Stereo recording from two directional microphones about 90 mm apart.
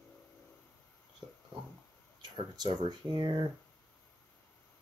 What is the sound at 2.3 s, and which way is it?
Speech, 60° right (ahead or behind).